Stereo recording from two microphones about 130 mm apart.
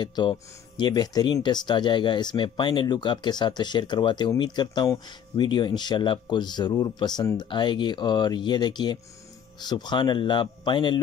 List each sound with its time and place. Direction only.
0.0 s speech: 35° left (ahead or behind)